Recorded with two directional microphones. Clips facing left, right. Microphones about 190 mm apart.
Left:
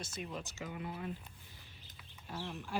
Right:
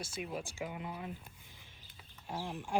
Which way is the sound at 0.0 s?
10° right (ahead or behind).